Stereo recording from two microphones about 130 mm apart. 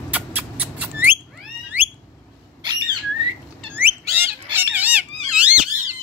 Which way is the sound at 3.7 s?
15° right (ahead or behind).